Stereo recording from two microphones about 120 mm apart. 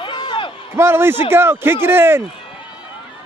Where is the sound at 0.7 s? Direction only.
20° right (ahead or behind).